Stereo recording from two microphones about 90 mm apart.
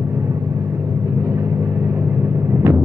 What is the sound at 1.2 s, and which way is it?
Vehicle, 30° right (ahead or behind).